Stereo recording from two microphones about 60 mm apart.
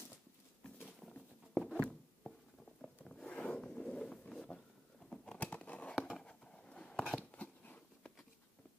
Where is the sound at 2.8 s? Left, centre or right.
Centre.